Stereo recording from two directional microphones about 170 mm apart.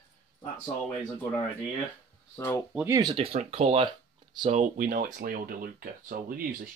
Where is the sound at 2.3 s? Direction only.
15° left (ahead or behind).